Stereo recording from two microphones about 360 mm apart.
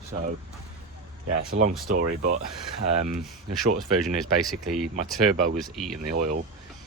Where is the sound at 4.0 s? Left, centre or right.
Centre.